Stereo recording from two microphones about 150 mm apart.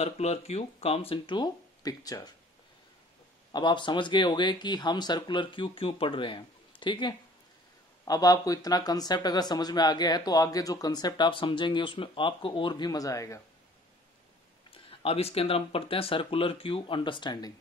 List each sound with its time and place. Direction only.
0.0 s speech: 45° left (ahead or behind); by 2.3 s 25° left (ahead or behind)
3.5 s speech: 30° left (ahead or behind)
14.7 s speech: 40° left (ahead or behind)